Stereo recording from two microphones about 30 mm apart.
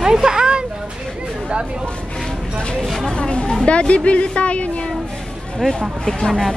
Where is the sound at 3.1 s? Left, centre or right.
Left.